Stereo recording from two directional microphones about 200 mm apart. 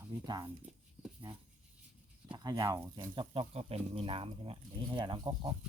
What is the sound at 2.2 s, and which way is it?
Speech, 20° right (ahead or behind).